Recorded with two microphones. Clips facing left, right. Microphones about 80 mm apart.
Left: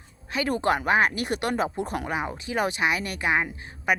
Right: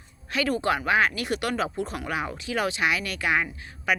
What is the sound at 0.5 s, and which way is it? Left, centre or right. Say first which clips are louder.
Speech: left 2 dB; left.